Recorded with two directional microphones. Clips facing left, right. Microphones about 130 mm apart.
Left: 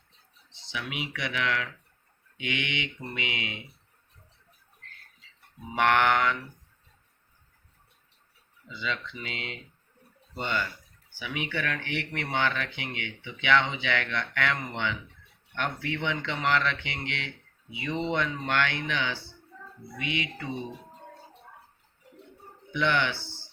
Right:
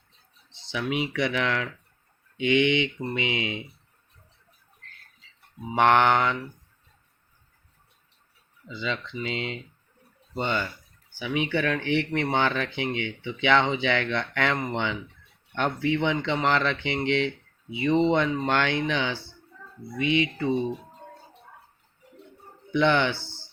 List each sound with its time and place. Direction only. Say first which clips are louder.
0.6 s speech: right 8 dB; 35° right (ahead or behind)
5.7 s speech: right 4 dB; 25° right (ahead or behind)
8.6 s speech: right 3 dB; 25° right (ahead or behind)
22.7 s speech: right 5 dB; 30° right (ahead or behind)